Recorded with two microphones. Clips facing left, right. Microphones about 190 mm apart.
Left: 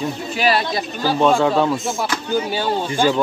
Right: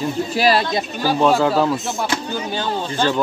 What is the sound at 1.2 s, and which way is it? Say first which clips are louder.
Speech: even; 5° right (ahead or behind).